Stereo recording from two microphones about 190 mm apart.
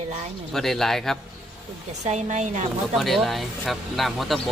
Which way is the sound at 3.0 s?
Centre (ahead or behind).